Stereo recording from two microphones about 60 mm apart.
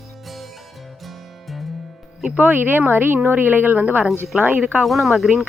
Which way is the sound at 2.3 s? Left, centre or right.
Right.